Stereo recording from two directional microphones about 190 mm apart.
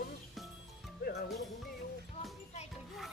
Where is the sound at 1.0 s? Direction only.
55° left (ahead or behind).